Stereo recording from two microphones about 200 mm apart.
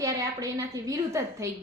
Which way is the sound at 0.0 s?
15° right (ahead or behind).